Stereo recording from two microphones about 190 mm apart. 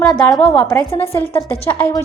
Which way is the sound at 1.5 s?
30° left (ahead or behind).